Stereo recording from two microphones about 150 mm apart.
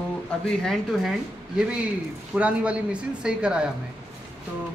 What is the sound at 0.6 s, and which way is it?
Speech, centre (ahead or behind).